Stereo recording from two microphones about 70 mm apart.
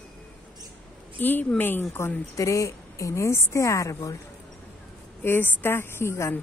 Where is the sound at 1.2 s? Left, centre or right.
Left.